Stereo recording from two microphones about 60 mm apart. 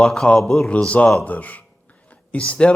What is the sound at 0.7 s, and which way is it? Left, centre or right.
Speech, left.